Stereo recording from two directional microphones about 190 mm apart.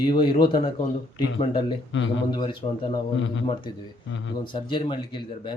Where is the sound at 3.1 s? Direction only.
75° left (ahead or behind).